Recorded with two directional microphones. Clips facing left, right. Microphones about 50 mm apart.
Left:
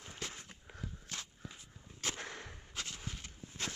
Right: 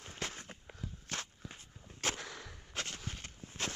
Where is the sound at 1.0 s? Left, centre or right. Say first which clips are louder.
Right 4 dB; right.